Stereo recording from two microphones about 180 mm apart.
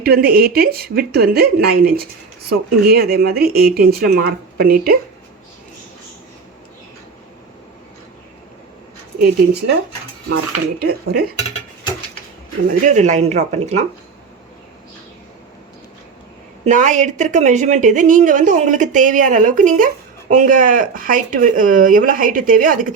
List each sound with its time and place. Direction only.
0.0 s speech: 60° right (ahead or behind)
10.2 s speech: 65° right (ahead or behind)
12.8 s speech: 40° right (ahead or behind)
16.6 s a woman's voice: 45° right (ahead or behind)